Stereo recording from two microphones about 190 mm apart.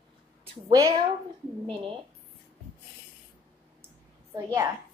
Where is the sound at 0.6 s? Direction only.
20° right (ahead or behind).